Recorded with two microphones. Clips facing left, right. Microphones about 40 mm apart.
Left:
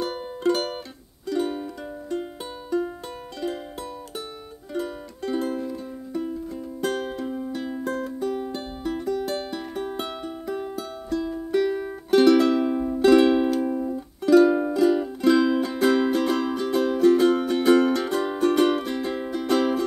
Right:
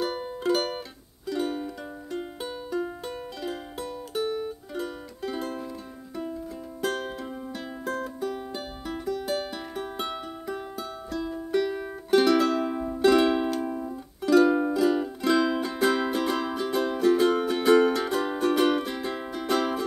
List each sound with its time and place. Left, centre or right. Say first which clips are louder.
0.0 s music: left 3 dB; centre
4.7 s music: left 7 dB; centre
6.8 s music: left 3 dB; centre